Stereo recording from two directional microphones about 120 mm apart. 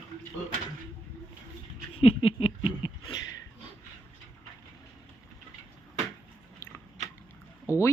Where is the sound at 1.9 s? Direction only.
50° left (ahead or behind).